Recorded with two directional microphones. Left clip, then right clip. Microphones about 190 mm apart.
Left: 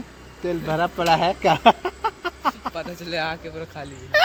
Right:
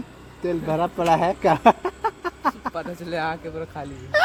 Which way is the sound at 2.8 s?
40° right (ahead or behind).